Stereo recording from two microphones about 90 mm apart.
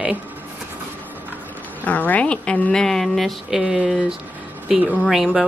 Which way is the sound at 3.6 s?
10° right (ahead or behind).